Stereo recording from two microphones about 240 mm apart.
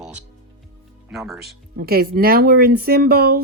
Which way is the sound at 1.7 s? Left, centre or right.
Right.